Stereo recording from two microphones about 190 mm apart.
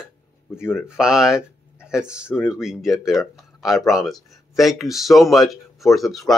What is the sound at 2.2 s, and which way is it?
Speech, 10° left (ahead or behind).